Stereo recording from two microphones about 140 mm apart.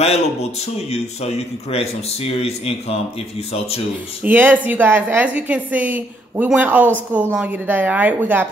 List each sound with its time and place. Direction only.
0.0 s a man's voice: 50° left (ahead or behind)
4.2 s a woman's voice: 15° right (ahead or behind)